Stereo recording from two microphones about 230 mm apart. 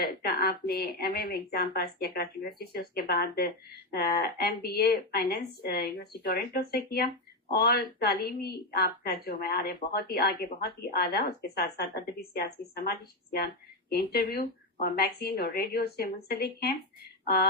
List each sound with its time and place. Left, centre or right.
0.0 s a woman's voice: left